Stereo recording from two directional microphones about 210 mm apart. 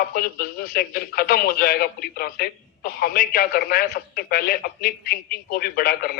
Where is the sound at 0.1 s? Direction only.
45° left (ahead or behind).